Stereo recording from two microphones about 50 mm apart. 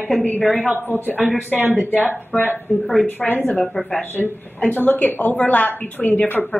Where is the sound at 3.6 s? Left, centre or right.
Centre.